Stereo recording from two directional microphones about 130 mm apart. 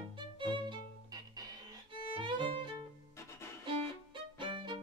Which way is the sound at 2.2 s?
40° right (ahead or behind).